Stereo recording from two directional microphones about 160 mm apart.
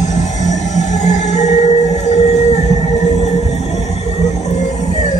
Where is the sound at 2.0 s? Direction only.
45° left (ahead or behind).